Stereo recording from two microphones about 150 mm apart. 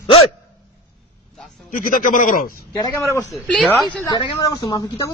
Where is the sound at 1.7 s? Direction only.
65° left (ahead or behind).